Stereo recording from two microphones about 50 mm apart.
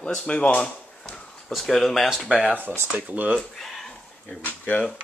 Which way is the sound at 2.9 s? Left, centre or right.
Right.